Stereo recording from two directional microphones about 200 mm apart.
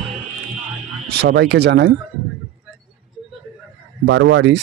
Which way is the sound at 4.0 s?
65° right (ahead or behind).